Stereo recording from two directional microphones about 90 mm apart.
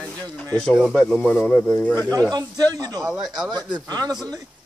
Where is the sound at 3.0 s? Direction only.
5° right (ahead or behind).